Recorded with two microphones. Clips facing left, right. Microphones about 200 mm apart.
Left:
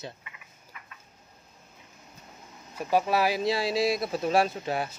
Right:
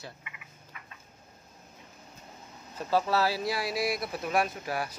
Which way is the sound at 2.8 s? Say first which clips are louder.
Left 2 dB; 15° left (ahead or behind).